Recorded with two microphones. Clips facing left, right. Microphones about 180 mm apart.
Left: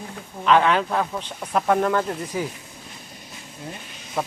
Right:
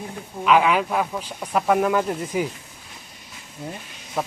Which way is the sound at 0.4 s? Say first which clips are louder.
Even; 5° right (ahead or behind).